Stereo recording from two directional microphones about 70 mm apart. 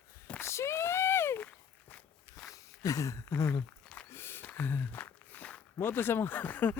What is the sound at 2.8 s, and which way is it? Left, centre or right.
Speech, left.